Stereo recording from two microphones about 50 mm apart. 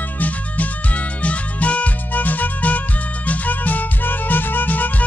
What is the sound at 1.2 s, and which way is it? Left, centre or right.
Music, left.